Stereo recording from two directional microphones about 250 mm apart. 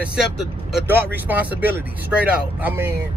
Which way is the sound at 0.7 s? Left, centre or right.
Centre.